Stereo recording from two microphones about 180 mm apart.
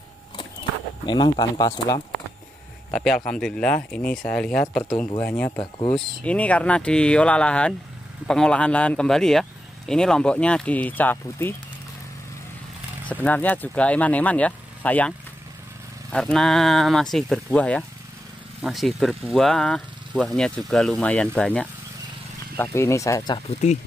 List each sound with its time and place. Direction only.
1.0 s speech: 25° left (ahead or behind)
2.9 s a man's voice: centre (ahead or behind)
13.1 s speech: 10° left (ahead or behind)